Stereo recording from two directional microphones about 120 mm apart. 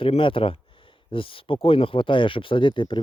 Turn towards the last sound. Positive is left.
turn(degrees=45)  # may be behind; listen again after turning